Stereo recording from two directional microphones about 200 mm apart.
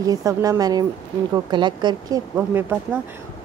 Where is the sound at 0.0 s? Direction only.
15° right (ahead or behind).